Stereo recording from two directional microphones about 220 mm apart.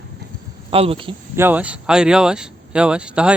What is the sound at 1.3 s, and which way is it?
Speech, 10° right (ahead or behind).